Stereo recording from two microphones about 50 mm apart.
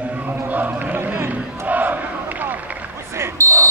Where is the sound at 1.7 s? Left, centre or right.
Right.